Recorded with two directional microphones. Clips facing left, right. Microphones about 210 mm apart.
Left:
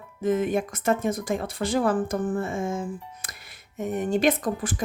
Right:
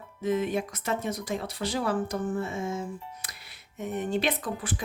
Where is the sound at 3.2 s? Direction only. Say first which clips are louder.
Left 2 dB; 50° left (ahead or behind).